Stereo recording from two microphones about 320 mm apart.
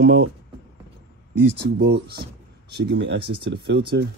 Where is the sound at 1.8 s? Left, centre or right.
Right.